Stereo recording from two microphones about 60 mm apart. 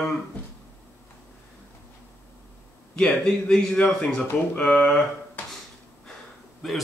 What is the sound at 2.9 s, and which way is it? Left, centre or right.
Speech, centre.